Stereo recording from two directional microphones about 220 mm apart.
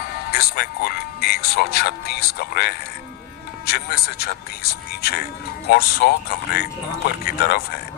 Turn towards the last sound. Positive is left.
turn(degrees=45)  # may be behind; listen again after turning